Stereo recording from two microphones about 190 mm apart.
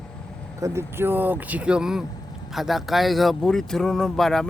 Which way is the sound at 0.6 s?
15° right (ahead or behind).